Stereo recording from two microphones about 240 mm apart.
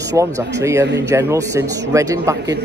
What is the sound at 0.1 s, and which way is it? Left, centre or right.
Speech, centre.